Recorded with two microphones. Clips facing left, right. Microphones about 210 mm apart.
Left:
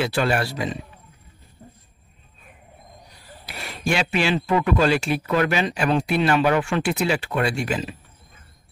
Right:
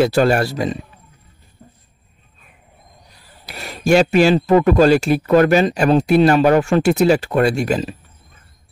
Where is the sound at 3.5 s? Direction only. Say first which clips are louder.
Right 10 dB; 40° right (ahead or behind).